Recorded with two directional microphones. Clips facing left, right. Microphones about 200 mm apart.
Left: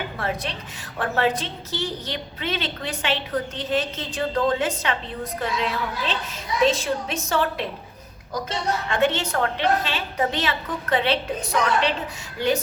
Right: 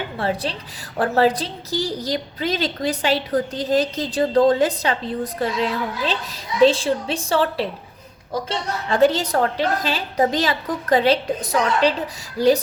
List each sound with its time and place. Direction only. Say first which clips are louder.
0.2 s a woman's voice: right 7 dB; 30° right (ahead or behind)